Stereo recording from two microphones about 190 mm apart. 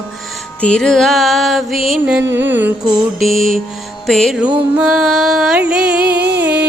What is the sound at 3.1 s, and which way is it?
Music, centre (ahead or behind).